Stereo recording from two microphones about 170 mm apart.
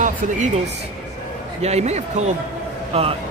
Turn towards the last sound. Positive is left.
turn(degrees=-35)  # may be behind; listen again after turning